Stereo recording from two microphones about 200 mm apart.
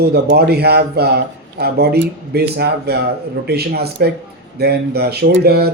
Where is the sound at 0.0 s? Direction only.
55° right (ahead or behind).